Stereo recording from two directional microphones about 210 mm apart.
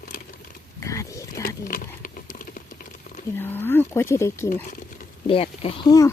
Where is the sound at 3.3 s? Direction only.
10° left (ahead or behind).